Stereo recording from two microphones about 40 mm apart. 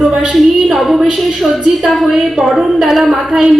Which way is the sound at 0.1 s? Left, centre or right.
Centre.